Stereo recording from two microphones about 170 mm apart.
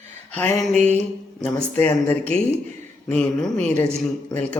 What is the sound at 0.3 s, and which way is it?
Speech, 10° left (ahead or behind).